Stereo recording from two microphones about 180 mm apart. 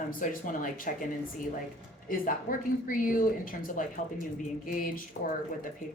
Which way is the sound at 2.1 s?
50° left (ahead or behind).